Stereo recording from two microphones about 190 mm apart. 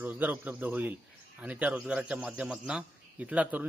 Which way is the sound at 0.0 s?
10° right (ahead or behind).